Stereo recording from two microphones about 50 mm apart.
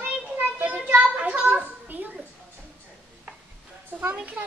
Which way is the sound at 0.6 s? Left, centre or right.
Right.